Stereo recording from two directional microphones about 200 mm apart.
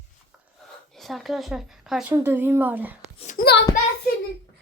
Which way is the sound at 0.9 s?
Centre (ahead or behind).